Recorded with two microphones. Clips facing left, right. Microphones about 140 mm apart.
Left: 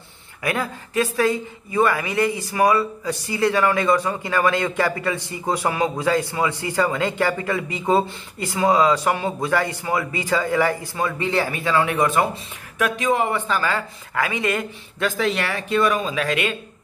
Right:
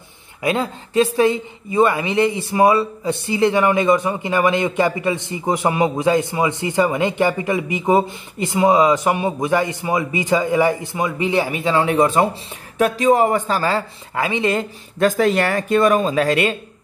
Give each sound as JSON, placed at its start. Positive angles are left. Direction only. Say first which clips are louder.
{"t": 0.4, "sound": "speech", "louder": "right 4 dB", "side_deg": -25}
{"t": 15.0, "sound": "speech", "louder": "right 6 dB", "side_deg": -45}